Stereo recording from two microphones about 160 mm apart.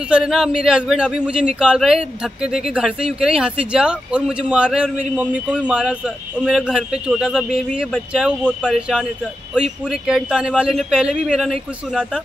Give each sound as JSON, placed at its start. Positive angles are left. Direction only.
{"t": 0.1, "sound": "speech", "side_deg": -5}